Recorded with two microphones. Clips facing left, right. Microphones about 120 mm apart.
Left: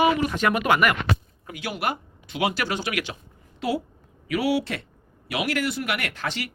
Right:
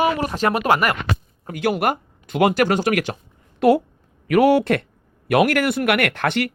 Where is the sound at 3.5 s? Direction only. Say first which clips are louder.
Right 11 dB; 55° right (ahead or behind).